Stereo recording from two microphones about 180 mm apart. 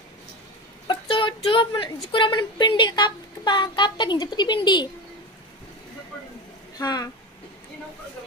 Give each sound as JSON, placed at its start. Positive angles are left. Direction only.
{"t": 0.8, "sound": "a sound", "side_deg": 30}
{"t": 2.1, "sound": "speech", "side_deg": 25}
{"t": 6.8, "sound": "speech", "side_deg": 20}